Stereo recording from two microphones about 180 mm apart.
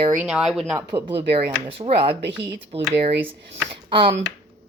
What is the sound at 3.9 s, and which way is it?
Speech, 30° right (ahead or behind).